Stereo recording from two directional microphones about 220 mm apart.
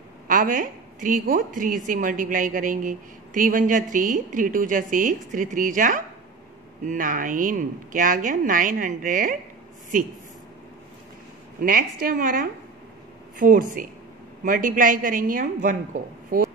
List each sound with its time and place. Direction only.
0.3 s a woman's voice: 40° right (ahead or behind)
11.6 s a woman's voice: 40° right (ahead or behind)